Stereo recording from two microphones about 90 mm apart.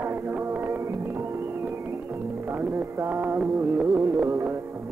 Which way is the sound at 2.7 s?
30° right (ahead or behind).